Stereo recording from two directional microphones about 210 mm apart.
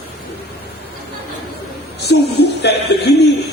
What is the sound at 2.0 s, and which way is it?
A man's voice, 50° left (ahead or behind).